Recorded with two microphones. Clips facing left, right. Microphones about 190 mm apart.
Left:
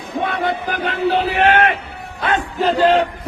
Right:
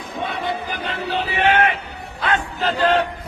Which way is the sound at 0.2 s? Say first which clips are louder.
Left 5 dB; 60° left (ahead or behind).